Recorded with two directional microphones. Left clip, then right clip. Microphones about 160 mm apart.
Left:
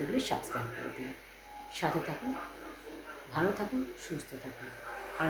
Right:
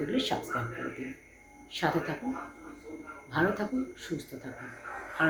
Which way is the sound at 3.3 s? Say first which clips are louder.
Right 3 dB; 10° left (ahead or behind).